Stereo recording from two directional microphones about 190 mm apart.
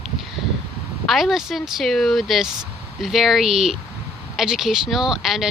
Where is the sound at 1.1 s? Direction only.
Centre (ahead or behind).